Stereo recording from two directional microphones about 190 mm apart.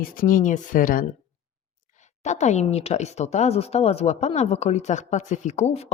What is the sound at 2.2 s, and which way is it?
Speech, 40° left (ahead or behind).